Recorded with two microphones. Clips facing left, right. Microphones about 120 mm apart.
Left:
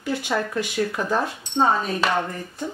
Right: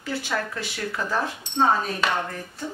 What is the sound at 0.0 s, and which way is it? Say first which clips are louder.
Speech: left 3 dB; 15° left (ahead or behind).